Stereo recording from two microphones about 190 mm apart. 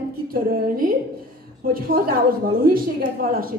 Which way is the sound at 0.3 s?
50° right (ahead or behind).